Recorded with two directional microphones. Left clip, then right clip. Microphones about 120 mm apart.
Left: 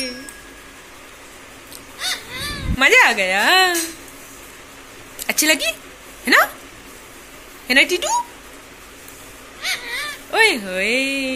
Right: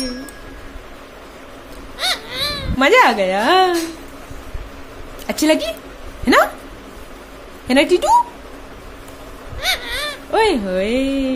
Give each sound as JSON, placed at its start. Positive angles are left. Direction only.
{"t": 2.0, "sound": "a sound", "side_deg": -75}
{"t": 2.8, "sound": "speech", "side_deg": -15}
{"t": 5.2, "sound": "a woman's voice", "side_deg": -20}
{"t": 6.2, "sound": "dog", "side_deg": -20}
{"t": 7.6, "sound": "a woman's voice", "side_deg": -25}
{"t": 9.6, "sound": "a sound", "side_deg": -90}
{"t": 10.3, "sound": "speech", "side_deg": -20}